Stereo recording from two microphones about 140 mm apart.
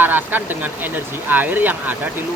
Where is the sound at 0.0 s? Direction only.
15° right (ahead or behind).